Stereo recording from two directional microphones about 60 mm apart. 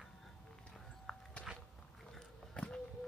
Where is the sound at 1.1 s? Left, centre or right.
Centre.